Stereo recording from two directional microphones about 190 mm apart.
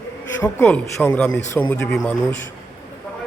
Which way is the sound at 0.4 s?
10° left (ahead or behind).